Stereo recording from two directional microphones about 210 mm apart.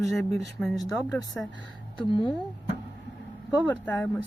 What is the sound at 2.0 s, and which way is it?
Speech, 20° left (ahead or behind).